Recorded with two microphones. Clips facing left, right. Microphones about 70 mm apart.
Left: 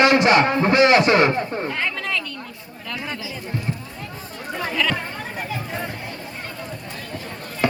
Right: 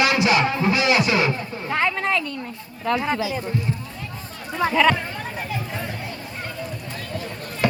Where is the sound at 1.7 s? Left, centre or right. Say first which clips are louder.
Right 4 dB; right.